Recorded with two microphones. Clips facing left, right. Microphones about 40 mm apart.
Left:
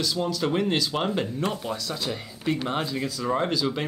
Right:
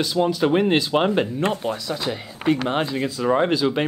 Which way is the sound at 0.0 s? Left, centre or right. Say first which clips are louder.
Right 6 dB; right.